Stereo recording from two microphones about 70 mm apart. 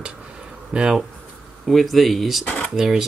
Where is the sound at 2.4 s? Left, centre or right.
Left.